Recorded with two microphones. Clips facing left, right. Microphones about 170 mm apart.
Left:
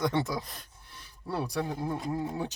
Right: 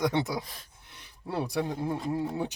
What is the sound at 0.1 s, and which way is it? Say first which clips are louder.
Speech: right 1 dB; 15° right (ahead or behind).